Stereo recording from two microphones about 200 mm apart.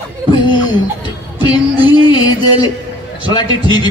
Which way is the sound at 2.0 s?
20° left (ahead or behind).